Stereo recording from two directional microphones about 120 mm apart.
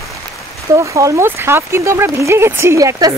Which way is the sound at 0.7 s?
25° right (ahead or behind).